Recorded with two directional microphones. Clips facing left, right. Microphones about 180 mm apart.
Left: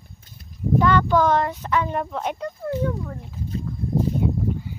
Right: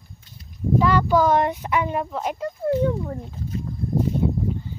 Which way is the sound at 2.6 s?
25° right (ahead or behind).